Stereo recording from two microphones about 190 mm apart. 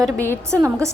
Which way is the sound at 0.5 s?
15° right (ahead or behind).